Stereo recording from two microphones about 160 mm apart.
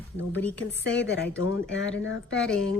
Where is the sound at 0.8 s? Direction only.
90° left.